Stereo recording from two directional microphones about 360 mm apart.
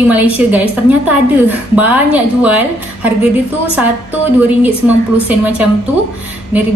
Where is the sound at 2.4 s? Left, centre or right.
Centre.